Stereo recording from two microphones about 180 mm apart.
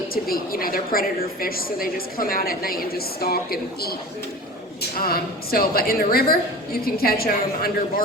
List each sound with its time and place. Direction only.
0.1 s a woman's voice: 55° left (ahead or behind)
4.9 s a woman's voice: 55° left (ahead or behind)